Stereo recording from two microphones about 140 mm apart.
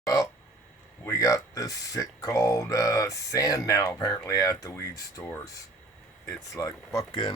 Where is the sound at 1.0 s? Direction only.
25° left (ahead or behind).